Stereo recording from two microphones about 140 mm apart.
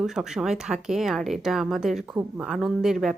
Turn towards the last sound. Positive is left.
turn(degrees=-5)  # may be behind; listen again after turning